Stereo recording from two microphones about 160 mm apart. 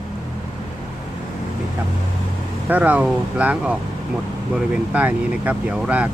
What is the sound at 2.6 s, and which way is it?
Speech, 10° right (ahead or behind).